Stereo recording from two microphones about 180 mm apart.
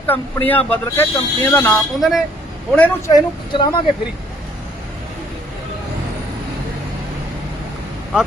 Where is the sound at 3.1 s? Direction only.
25° left (ahead or behind).